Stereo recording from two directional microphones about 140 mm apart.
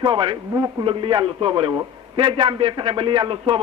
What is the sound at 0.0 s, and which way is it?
A man's voice, 35° right (ahead or behind).